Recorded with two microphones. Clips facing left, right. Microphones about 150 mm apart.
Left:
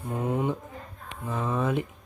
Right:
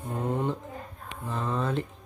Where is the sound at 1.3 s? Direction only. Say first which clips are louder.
Left 2 dB; 15° left (ahead or behind).